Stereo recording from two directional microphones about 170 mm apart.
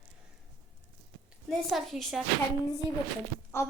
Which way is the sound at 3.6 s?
15° left (ahead or behind).